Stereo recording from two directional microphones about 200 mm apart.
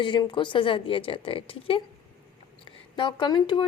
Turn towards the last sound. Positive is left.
turn(degrees=20)  # may be behind; listen again after turning